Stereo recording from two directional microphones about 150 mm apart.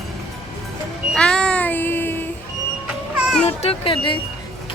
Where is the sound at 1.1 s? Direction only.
5° left (ahead or behind).